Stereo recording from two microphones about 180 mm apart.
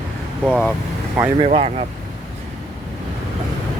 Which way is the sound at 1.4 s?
35° right (ahead or behind).